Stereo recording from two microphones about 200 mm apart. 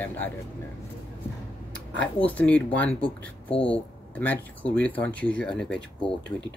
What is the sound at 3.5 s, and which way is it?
Speech, 25° left (ahead or behind).